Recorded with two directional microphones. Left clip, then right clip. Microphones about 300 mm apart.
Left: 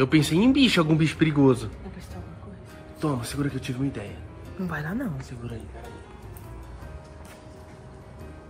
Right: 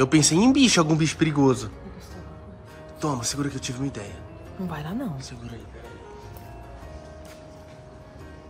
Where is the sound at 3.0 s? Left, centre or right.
Centre.